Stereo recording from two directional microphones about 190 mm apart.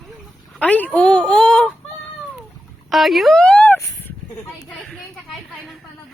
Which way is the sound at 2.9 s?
Centre (ahead or behind).